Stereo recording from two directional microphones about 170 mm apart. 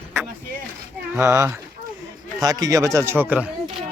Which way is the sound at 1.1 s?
15° right (ahead or behind).